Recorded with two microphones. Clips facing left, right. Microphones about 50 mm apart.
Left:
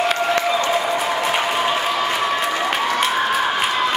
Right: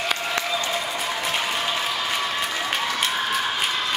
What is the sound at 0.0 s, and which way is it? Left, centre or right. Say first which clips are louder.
Applause: left 7 dB; centre.